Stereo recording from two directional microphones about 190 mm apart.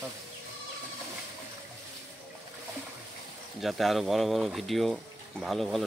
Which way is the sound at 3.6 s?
Centre (ahead or behind).